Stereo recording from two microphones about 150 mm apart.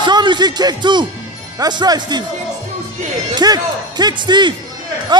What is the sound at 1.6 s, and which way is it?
Speech, 30° right (ahead or behind).